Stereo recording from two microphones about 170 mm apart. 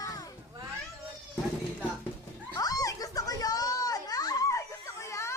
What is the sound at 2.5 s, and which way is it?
Children playing, 20° left (ahead or behind).